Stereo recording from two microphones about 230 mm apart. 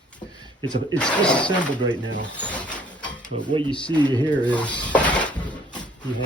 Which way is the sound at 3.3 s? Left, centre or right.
Right.